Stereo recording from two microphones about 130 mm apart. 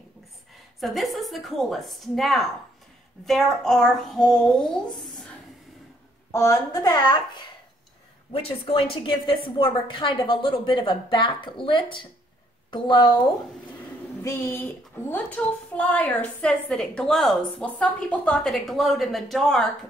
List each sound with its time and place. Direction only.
0.7 s speech: centre (ahead or behind)
6.3 s a woman's voice: 25° left (ahead or behind)
8.3 s a woman's voice: 45° left (ahead or behind)
14.2 s a woman's voice: 15° left (ahead or behind); by 19.6 s centre (ahead or behind)